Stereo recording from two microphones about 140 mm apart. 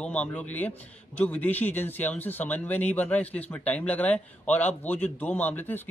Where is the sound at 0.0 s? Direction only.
10° left (ahead or behind).